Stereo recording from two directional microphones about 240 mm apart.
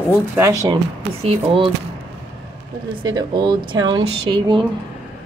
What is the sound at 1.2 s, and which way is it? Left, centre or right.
Speech, right.